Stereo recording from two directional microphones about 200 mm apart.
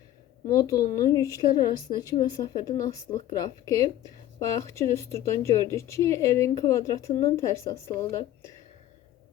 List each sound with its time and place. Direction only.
0.4 s a woman's voice: 20° left (ahead or behind)